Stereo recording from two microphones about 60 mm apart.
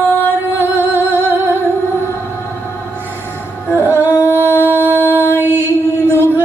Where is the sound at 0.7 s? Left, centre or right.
Right.